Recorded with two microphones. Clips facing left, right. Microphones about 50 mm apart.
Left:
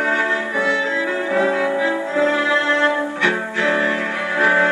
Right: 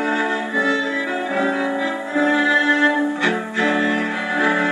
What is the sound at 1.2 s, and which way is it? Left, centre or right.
Music, centre.